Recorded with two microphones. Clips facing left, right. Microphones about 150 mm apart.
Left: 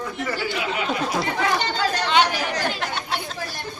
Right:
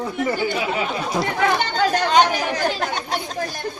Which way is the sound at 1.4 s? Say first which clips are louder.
Right 5 dB; 55° right (ahead or behind).